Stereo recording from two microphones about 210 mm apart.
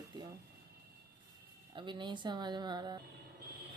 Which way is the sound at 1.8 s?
20° right (ahead or behind).